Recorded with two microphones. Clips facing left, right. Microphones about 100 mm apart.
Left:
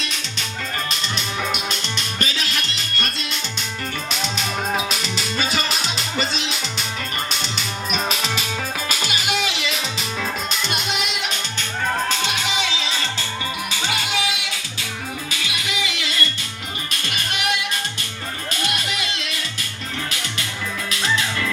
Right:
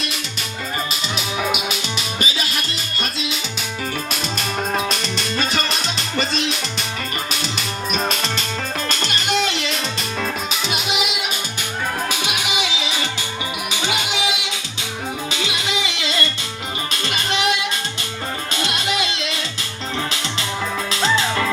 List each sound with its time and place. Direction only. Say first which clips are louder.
0.0 s music: right 2 dB; 5° right (ahead or behind); by 19.4 s 20° right (ahead or behind)
20.9 s music: right 4 dB; 30° right (ahead or behind)